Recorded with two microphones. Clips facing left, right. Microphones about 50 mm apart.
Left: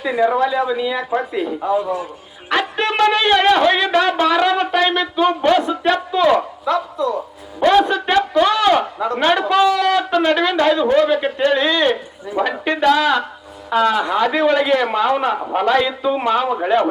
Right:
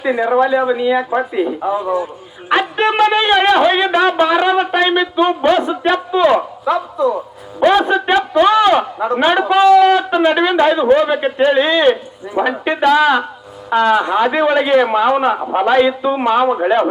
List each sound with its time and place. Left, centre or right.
0.0 s speech: centre
6.9 s speech: right
7.6 s speech: centre